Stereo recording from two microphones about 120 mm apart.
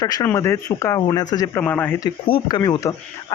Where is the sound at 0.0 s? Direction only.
30° left (ahead or behind).